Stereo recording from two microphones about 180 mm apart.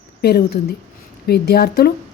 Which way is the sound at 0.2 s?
60° left (ahead or behind).